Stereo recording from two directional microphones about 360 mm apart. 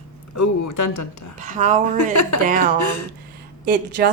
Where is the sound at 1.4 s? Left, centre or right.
Centre.